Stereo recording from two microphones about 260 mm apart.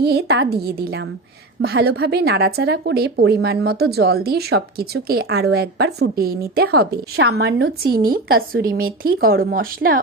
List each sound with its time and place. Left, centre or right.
0.0 s speech: right
8.7 s speech: right